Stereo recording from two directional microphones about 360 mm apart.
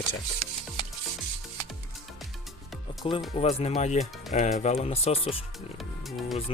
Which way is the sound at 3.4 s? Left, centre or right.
Centre.